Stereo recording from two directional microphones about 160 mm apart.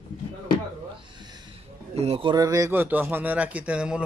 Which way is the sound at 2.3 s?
20° right (ahead or behind).